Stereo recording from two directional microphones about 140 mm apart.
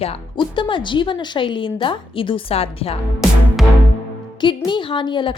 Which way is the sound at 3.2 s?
Centre (ahead or behind).